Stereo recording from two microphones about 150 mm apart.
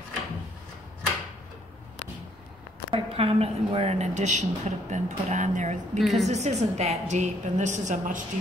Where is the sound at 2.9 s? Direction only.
40° right (ahead or behind).